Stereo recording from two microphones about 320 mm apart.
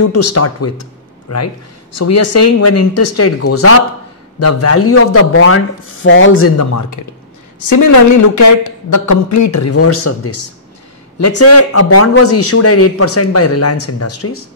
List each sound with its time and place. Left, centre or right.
0.1 s a man's voice: left